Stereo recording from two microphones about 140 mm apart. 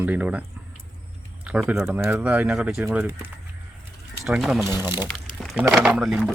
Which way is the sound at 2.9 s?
20° right (ahead or behind).